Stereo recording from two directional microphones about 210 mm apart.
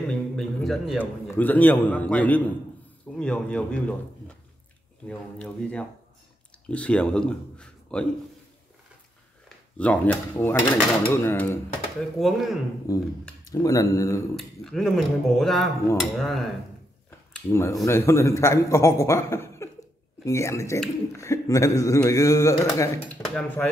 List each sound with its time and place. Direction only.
0.1 s a man's voice: 5° left (ahead or behind)
5.0 s speech: 5° left (ahead or behind)
9.8 s speech: 5° left (ahead or behind)
12.2 s speech: centre (ahead or behind)
12.9 s speech: 15° left (ahead or behind)
14.3 s speech: centre (ahead or behind)
17.3 s speech: 10° left (ahead or behind)